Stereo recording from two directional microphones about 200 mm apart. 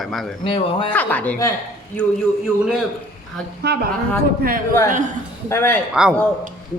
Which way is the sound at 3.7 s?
55° right (ahead or behind).